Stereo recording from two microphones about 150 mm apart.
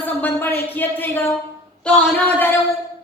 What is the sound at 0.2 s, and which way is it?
Speech, 15° left (ahead or behind).